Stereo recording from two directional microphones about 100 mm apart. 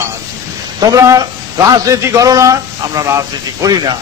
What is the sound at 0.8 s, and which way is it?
A man's voice, 35° right (ahead or behind).